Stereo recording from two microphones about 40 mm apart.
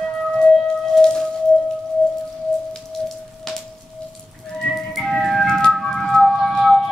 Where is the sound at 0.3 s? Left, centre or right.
Centre.